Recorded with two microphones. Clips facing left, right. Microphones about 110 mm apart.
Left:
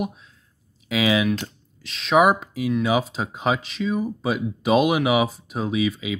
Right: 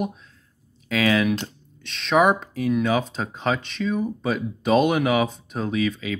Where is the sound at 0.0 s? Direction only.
5° left (ahead or behind).